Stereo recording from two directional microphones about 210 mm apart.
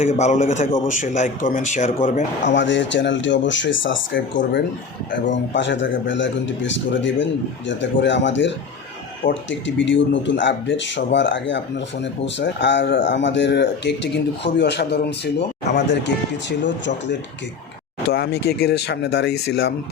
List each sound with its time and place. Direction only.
0.0 s a man's voice: 35° left (ahead or behind)
2.6 s speech: 60° left (ahead or behind)